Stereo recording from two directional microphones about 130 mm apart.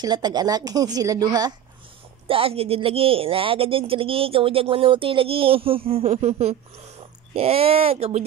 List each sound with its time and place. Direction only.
0.0 s a woman's voice: 35° right (ahead or behind)
2.2 s speech: 45° right (ahead or behind)